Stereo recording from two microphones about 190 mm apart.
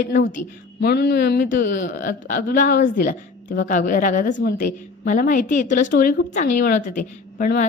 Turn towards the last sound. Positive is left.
turn(degrees=45)  # may be behind; listen again after turning